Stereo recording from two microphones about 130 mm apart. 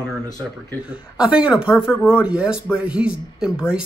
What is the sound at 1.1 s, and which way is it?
Speech, 10° right (ahead or behind).